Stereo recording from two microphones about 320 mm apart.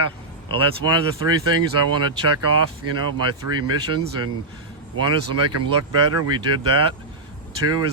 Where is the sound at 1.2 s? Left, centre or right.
Right.